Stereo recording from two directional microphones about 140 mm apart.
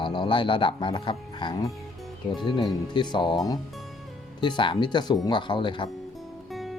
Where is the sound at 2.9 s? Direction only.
30° left (ahead or behind).